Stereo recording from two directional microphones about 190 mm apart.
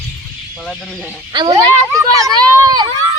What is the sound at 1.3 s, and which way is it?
Speech, 25° right (ahead or behind).